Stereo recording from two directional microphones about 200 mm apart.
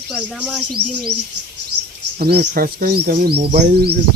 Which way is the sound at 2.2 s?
50° right (ahead or behind).